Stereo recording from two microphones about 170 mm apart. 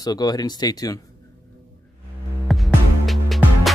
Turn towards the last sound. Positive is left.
turn(degrees=0)  # may be behind; listen again after turning